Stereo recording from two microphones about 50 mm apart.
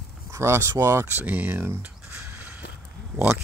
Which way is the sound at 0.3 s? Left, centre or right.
Right.